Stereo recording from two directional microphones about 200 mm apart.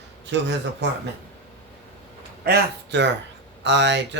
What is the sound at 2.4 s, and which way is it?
Speech, 60° right (ahead or behind).